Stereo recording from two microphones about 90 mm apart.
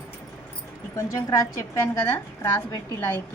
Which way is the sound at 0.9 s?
35° left (ahead or behind).